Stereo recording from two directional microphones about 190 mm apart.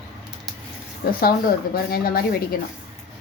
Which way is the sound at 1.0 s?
55° left (ahead or behind).